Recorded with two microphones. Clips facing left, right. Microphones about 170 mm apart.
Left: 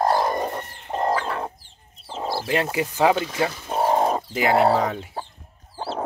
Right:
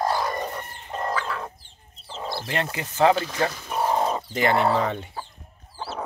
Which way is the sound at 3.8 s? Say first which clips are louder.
Left 3 dB; 50° left (ahead or behind).